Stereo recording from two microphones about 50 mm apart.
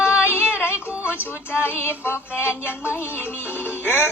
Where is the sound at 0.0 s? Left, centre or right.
Left.